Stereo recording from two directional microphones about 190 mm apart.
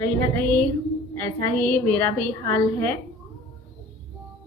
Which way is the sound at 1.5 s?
5° left (ahead or behind).